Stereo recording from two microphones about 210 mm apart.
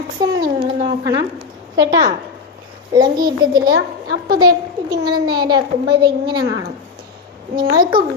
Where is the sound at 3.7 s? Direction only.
55° right (ahead or behind).